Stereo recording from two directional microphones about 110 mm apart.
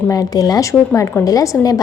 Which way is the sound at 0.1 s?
35° left (ahead or behind).